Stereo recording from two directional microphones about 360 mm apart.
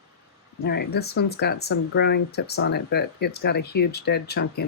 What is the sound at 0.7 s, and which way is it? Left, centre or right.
Speech, left.